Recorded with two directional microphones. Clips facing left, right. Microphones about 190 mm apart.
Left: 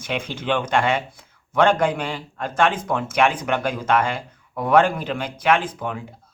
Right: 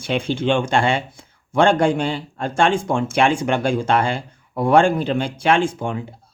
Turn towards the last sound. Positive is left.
turn(degrees=-25)  # may be behind; listen again after turning